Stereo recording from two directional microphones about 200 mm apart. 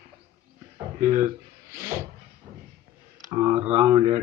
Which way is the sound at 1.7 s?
10° right (ahead or behind).